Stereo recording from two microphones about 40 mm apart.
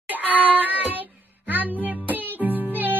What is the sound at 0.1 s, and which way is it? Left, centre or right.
Child singing, right.